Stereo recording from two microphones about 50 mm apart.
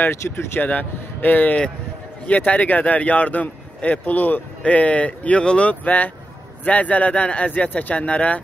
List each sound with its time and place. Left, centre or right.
0.0 s speech: left
0.6 s speech: left
5.7 s speech: left